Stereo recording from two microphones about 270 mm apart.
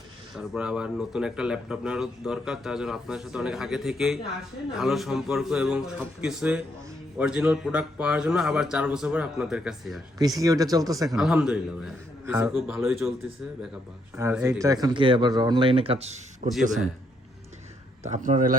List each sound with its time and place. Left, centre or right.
0.3 s speech: centre
10.2 s speech: centre
11.1 s speech: centre
14.2 s speech: centre; by 16.5 s right
18.0 s a man's voice: right